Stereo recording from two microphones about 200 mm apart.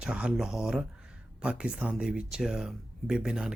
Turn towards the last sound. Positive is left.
turn(degrees=-5)  # may be behind; listen again after turning